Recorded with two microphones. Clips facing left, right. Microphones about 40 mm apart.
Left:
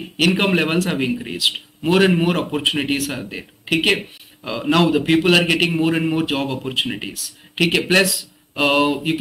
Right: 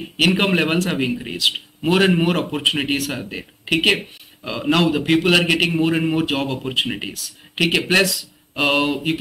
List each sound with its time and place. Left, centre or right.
0.3 s a man's voice: centre